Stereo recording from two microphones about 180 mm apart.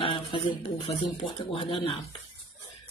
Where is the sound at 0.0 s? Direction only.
30° left (ahead or behind).